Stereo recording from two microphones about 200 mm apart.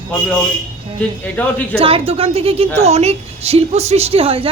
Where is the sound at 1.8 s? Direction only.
30° right (ahead or behind).